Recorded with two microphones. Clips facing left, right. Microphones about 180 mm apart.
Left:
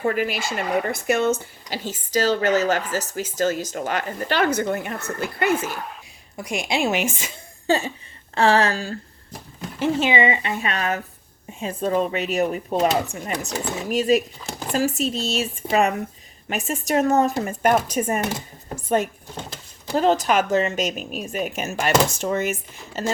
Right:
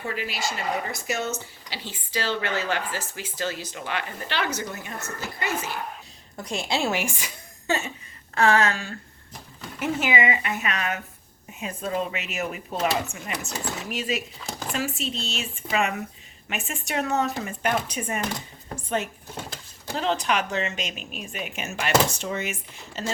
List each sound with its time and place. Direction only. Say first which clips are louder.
0.0 s speech: left 7 dB; 50° left (ahead or behind)
6.3 s a woman's voice: left 3 dB; 10° left (ahead or behind)
7.7 s speech: left 6 dB; 30° left (ahead or behind)
20.0 s speech: left 6 dB; 40° left (ahead or behind)